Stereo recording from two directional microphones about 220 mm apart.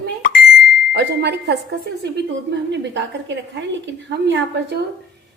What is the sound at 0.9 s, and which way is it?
A woman's voice, 50° right (ahead or behind).